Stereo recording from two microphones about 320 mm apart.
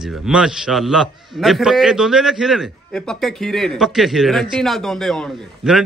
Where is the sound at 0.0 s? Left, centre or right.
Centre.